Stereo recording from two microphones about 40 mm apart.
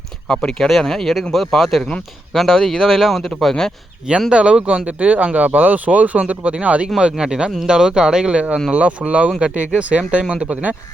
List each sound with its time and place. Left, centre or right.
0.3 s speech: centre
4.3 s speech: right
7.2 s speech: centre
10.5 s speech: right